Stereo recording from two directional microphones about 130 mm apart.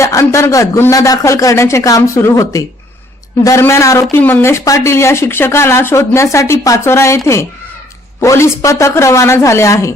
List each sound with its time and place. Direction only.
0.0 s a man's voice: 25° left (ahead or behind)
8.2 s a man's voice: 25° left (ahead or behind)